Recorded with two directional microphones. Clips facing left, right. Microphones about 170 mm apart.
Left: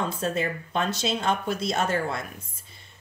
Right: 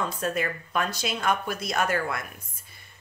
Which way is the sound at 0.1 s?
25° left (ahead or behind).